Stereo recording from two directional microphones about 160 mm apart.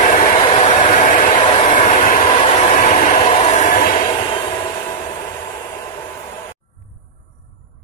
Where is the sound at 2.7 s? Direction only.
50° left (ahead or behind).